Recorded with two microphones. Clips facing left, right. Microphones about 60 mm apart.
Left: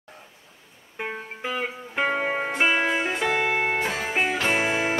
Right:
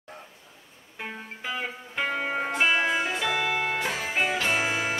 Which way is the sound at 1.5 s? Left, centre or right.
Left.